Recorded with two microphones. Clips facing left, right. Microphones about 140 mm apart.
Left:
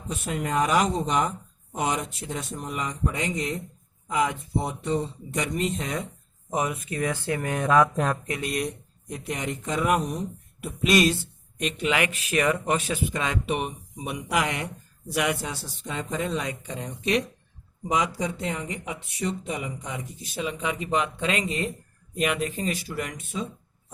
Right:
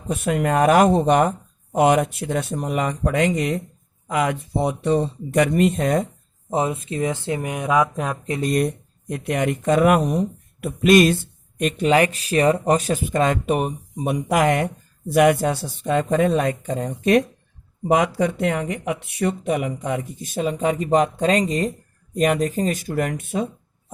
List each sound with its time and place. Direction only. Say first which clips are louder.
0.1 s speech: right 8 dB; 60° right (ahead or behind)
6.5 s speech: right 5 dB; 30° right (ahead or behind); by 8.2 s 5° right (ahead or behind)
8.3 s speech: right 8 dB; 40° right (ahead or behind)
9.0 s speech: right 9 dB; 60° right (ahead or behind)
11.8 s speech: right 8 dB; 35° right (ahead or behind); by 23.5 s 60° right (ahead or behind)